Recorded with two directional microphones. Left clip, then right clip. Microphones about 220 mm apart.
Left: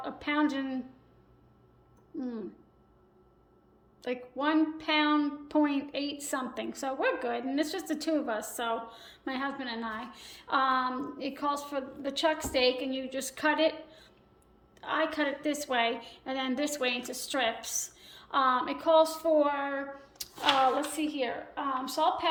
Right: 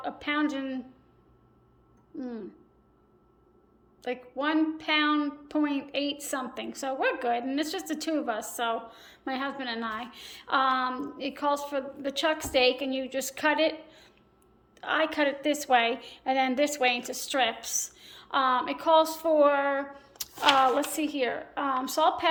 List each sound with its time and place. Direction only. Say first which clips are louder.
0.0 s a woman's voice: right 1 dB; 5° right (ahead or behind)
2.1 s a woman's voice: even; centre (ahead or behind)
4.0 s a woman's voice: right 1 dB; 5° right (ahead or behind)